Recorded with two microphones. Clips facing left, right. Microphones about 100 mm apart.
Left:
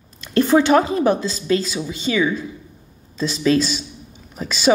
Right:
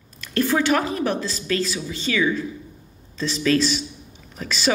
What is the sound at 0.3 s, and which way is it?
A woman's voice, 25° left (ahead or behind).